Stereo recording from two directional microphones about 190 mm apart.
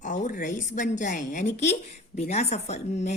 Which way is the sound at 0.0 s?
40° left (ahead or behind).